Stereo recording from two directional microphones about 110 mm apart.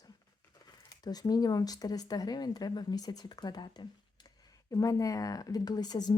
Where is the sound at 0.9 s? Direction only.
35° left (ahead or behind).